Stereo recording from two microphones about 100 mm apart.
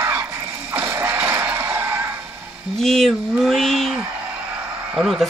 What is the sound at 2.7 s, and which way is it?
Speech, 5° left (ahead or behind).